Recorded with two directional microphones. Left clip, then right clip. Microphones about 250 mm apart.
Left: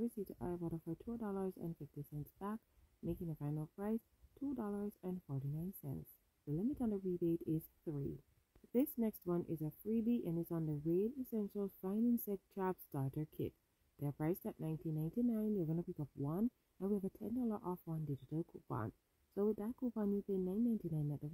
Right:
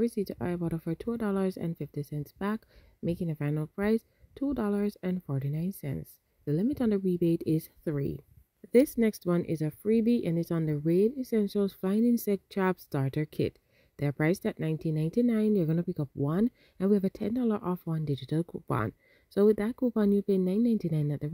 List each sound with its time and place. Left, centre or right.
0.0 s speech: right